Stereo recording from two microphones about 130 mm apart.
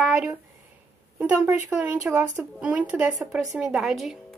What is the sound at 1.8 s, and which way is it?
Speech, 15° right (ahead or behind).